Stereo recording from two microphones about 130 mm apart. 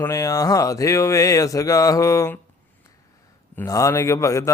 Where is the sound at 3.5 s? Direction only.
25° left (ahead or behind).